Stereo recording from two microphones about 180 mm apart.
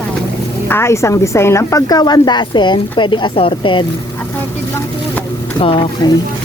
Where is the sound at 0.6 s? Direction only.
15° left (ahead or behind); by 3.8 s 30° left (ahead or behind).